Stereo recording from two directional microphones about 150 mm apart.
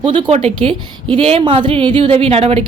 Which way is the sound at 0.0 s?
30° right (ahead or behind).